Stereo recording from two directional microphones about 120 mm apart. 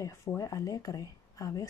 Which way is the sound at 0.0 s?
25° left (ahead or behind).